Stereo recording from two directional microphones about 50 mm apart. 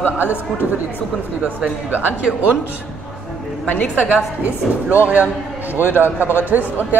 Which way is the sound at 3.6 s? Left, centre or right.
Left.